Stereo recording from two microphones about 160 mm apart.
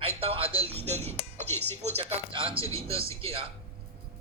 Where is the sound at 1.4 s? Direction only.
15° left (ahead or behind).